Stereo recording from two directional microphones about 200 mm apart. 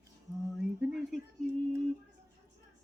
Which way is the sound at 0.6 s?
Centre (ahead or behind).